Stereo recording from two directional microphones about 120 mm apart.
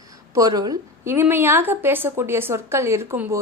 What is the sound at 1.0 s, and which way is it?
A woman's voice, 20° right (ahead or behind).